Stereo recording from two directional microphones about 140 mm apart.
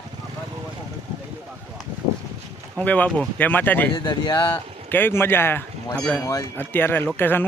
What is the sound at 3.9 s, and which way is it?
Speech, 30° left (ahead or behind).